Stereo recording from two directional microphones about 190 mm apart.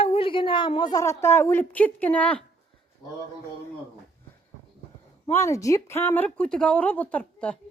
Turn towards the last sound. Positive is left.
turn(degrees=5)  # may be behind; listen again after turning